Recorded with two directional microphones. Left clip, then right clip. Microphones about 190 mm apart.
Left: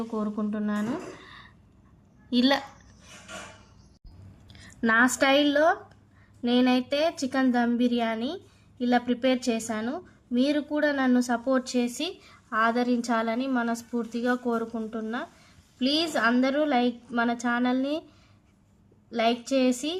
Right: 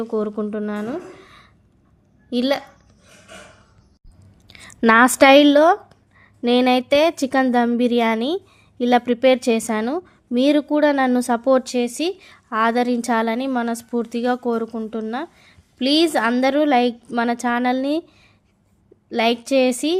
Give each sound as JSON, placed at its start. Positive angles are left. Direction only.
{"t": 0.1, "sound": "a woman's voice", "side_deg": -30}
{"t": 4.4, "sound": "a woman's voice", "side_deg": -45}
{"t": 19.1, "sound": "a woman's voice", "side_deg": -40}